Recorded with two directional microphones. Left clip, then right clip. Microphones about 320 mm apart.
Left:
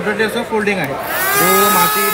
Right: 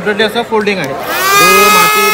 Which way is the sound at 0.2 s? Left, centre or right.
Centre.